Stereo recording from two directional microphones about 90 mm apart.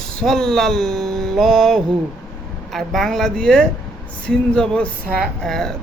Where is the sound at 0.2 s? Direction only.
5° left (ahead or behind).